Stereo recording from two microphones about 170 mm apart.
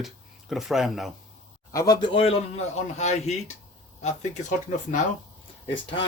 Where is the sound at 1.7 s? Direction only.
20° left (ahead or behind); by 4.9 s 45° left (ahead or behind).